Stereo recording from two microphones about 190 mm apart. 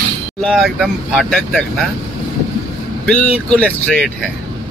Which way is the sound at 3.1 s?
5° left (ahead or behind).